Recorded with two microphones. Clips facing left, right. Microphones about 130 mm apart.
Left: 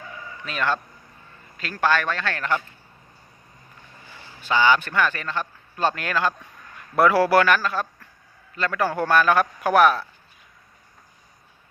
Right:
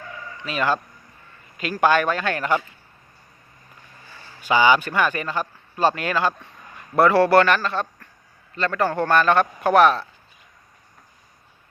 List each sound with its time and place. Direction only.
0.4 s speech: 5° right (ahead or behind)
4.1 s a sound: 15° left (ahead or behind)
4.4 s a man's voice: 10° right (ahead or behind)